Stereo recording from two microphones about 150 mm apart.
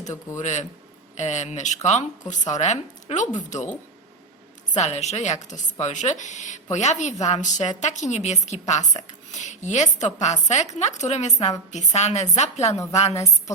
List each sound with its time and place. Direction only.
0.3 s a woman's voice: 50° left (ahead or behind)
4.7 s a woman's voice: 50° left (ahead or behind)